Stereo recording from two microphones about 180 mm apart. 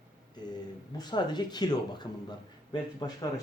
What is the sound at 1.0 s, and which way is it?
Speech, 25° left (ahead or behind).